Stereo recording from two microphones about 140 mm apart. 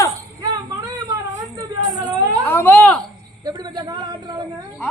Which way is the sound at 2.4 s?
15° left (ahead or behind).